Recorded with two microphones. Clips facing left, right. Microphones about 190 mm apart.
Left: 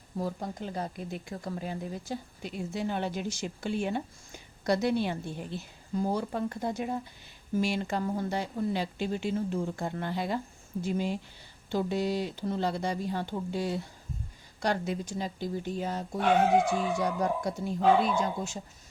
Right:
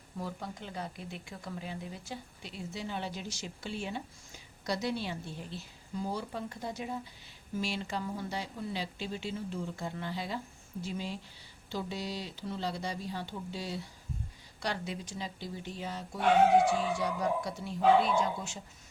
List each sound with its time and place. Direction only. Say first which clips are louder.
0.2 s speech: left 6 dB; 40° left (ahead or behind)